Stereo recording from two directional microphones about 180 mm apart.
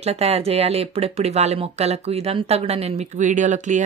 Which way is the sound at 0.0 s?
35° right (ahead or behind).